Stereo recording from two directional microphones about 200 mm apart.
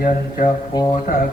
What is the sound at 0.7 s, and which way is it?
Mantra, 20° left (ahead or behind).